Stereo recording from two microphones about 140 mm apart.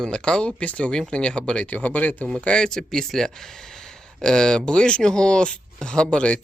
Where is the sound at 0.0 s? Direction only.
5° left (ahead or behind).